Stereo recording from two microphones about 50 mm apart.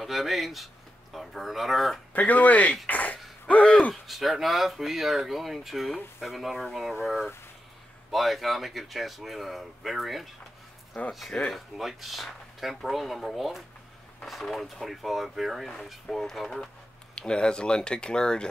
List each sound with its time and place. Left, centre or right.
0.0 s speech: centre
2.1 s speech: left
2.9 s a sound: left
3.9 s speech: centre
10.9 s speech: centre
11.5 s speech: centre
17.1 s speech: centre